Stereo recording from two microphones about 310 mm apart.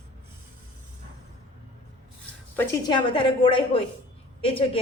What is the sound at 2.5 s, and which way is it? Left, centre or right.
A woman's voice, centre.